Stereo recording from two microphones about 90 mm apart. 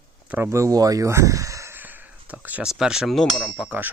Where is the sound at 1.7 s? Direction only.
20° right (ahead or behind).